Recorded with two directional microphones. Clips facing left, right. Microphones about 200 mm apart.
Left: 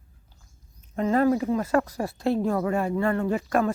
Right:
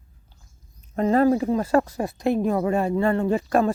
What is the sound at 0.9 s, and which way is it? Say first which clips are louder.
Speech: right 3 dB; 35° right (ahead or behind).